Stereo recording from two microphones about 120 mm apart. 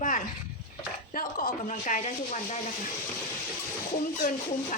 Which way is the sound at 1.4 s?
90° left.